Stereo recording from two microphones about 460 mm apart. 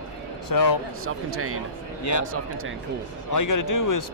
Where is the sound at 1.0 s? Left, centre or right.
Right.